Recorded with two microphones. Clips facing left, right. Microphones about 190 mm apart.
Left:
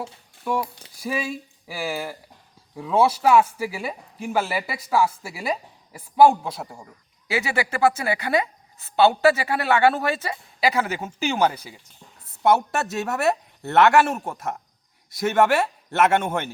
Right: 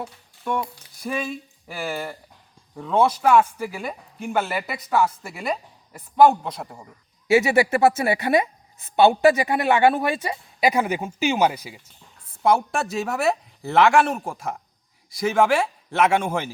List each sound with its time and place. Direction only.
0.4 s speech: 5° left (ahead or behind)
7.3 s speech: 25° right (ahead or behind)
12.4 s speech: 5° left (ahead or behind)